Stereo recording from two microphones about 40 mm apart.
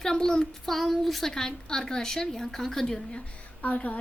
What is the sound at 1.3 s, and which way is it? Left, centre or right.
Speech, centre.